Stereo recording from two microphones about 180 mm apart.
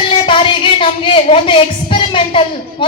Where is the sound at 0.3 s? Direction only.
30° left (ahead or behind).